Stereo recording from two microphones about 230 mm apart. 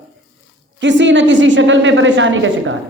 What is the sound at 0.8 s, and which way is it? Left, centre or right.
A woman's voice, right.